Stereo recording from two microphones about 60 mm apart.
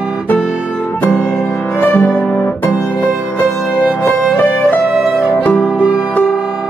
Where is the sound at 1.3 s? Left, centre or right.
Left.